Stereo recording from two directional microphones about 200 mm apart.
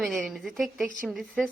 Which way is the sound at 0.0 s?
Centre (ahead or behind).